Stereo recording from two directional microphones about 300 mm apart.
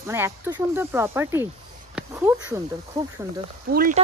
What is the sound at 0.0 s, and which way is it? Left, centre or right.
Speech, centre.